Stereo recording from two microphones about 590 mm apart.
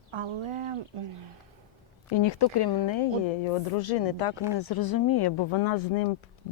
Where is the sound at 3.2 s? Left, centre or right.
Left.